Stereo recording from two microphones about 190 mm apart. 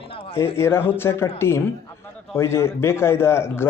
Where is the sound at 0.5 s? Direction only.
15° left (ahead or behind).